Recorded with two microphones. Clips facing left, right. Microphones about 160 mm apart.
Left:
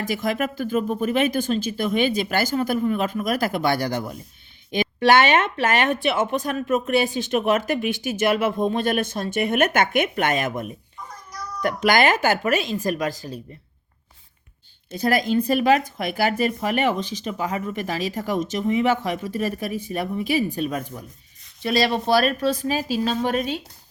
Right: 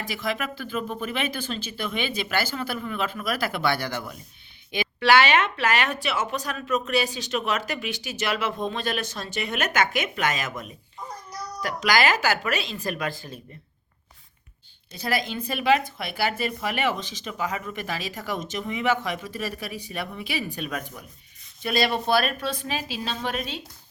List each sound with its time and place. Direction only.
0.0 s speech: 45° left (ahead or behind)
4.7 s a sound: 45° left (ahead or behind)
5.6 s speech: 25° left (ahead or behind)
6.0 s speech: 50° left (ahead or behind)
11.6 s speech: 55° left (ahead or behind); by 13.4 s 40° left (ahead or behind)
14.9 s speech: 45° left (ahead or behind)